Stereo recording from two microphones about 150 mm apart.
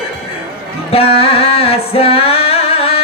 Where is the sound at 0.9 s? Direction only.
40° left (ahead or behind).